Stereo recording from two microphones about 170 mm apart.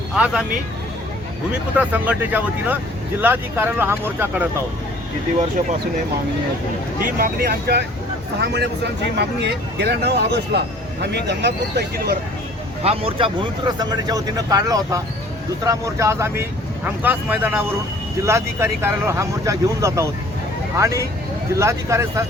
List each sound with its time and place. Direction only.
1.8 s speech: 10° right (ahead or behind)
7.0 s speech: 60° right (ahead or behind)
8.4 s speech: 80° right
12.8 s speech: 35° right (ahead or behind); by 22.2 s 15° right (ahead or behind)